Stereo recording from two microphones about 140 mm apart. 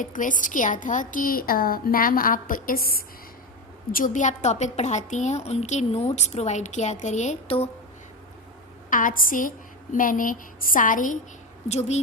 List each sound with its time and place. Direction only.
0.0 s a woman's voice: 70° left (ahead or behind); by 3.0 s 90° left
3.9 s a woman's voice: 70° left (ahead or behind); by 7.7 s 45° left (ahead or behind)
8.9 s a woman's voice: 75° left (ahead or behind)
11.7 s a woman's voice: 50° left (ahead or behind)